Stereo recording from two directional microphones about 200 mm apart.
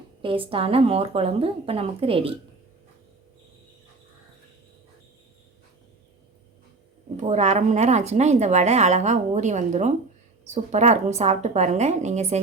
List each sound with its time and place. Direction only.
0.2 s a woman's voice: 25° right (ahead or behind)
7.2 s a woman's voice: 35° right (ahead or behind)